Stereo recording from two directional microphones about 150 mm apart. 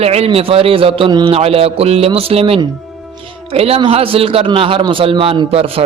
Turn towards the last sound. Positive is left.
turn(degrees=-40)  # may be behind; listen again after turning